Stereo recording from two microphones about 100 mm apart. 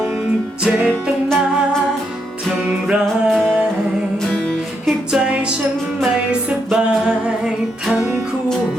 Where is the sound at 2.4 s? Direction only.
5° right (ahead or behind).